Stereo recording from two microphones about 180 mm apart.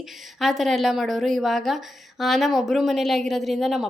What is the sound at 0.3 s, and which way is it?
A woman's voice, centre (ahead or behind).